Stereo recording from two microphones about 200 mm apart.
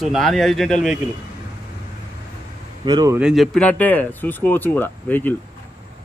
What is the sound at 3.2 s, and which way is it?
Speech, centre (ahead or behind).